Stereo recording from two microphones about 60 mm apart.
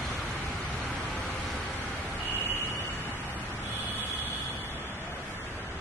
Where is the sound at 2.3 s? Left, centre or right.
Right.